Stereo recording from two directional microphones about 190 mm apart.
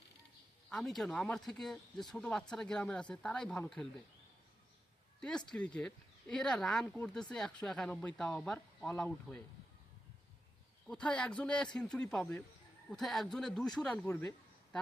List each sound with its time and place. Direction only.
0.7 s speech: centre (ahead or behind)
5.5 s speech: 5° left (ahead or behind)
10.8 s speech: 5° left (ahead or behind)